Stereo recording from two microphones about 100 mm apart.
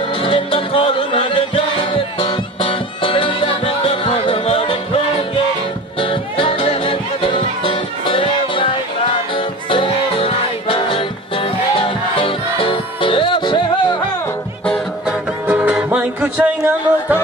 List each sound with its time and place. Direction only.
0.2 s music: 60° left (ahead or behind)
5.9 s music: 60° left (ahead or behind)
15.0 s music: 15° right (ahead or behind)